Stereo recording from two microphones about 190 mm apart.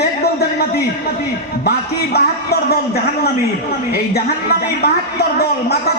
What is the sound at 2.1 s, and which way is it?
Speech, 55° left (ahead or behind).